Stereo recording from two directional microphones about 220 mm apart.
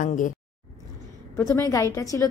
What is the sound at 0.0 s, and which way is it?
Speech, 35° left (ahead or behind).